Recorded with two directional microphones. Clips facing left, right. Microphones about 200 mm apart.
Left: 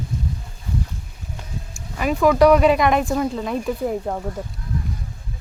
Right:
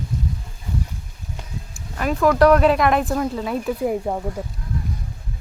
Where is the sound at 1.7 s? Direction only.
5° left (ahead or behind).